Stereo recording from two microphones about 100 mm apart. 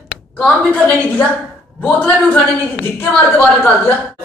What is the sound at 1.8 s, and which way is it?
A man's voice, 15° left (ahead or behind).